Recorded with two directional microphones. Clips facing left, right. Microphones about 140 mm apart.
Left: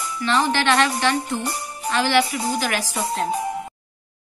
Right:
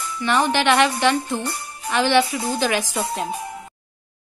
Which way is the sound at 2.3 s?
20° left (ahead or behind).